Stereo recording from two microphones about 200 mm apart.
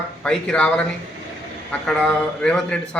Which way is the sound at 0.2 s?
5° left (ahead or behind).